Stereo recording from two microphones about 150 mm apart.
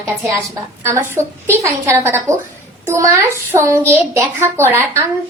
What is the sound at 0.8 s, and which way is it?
A woman's voice, 15° right (ahead or behind).